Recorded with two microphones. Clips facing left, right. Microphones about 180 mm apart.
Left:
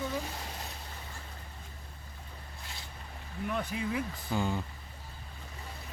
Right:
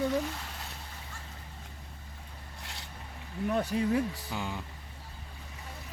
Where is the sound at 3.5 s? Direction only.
40° right (ahead or behind).